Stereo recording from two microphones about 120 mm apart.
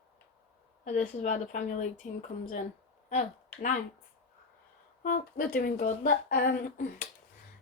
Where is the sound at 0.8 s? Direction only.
90° left.